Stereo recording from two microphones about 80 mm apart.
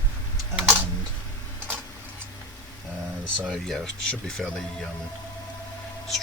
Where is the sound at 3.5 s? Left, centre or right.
Centre.